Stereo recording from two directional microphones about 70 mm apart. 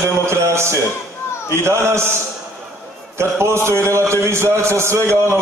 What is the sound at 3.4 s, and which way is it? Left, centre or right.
A man's voice, right.